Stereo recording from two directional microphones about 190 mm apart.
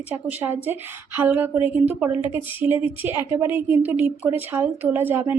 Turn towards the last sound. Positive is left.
turn(degrees=-10)  # may be behind; listen again after turning